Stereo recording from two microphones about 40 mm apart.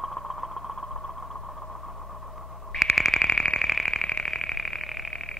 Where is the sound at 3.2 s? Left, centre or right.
Centre.